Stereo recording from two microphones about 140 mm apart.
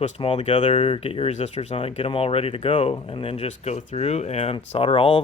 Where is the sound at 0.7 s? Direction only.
40° left (ahead or behind).